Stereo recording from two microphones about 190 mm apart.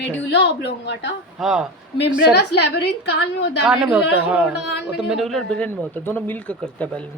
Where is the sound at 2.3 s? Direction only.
60° left (ahead or behind).